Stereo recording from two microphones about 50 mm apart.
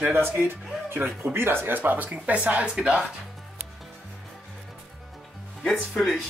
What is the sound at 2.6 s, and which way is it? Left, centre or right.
Speech, centre.